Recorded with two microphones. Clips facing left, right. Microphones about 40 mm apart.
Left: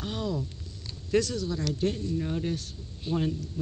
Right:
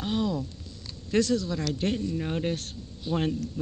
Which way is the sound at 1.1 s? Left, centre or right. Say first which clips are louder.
Right 2 dB; right.